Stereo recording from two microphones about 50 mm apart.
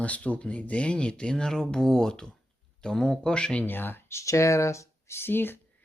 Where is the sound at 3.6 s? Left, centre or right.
Left.